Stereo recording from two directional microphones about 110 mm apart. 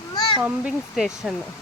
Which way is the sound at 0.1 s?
40° left (ahead or behind).